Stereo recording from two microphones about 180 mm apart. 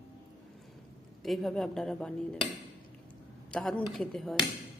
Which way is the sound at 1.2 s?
Centre (ahead or behind).